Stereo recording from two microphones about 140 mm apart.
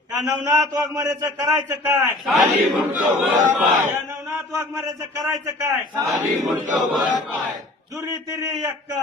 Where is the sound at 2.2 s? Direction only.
Centre (ahead or behind).